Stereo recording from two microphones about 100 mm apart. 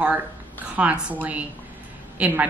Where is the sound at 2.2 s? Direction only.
20° right (ahead or behind).